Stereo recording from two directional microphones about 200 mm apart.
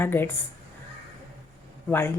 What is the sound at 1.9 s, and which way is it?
Speech, 10° left (ahead or behind).